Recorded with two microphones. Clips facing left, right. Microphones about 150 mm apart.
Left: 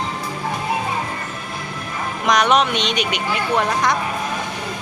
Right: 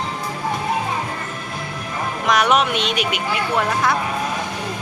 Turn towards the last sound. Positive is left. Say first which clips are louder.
# left 1 dB
turn(degrees=-5)  # may be behind; listen again after turning